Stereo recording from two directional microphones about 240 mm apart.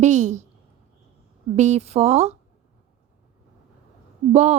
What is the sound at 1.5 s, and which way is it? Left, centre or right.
Speech, right.